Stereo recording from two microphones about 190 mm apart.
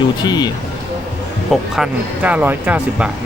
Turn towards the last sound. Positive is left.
turn(degrees=-10)  # may be behind; listen again after turning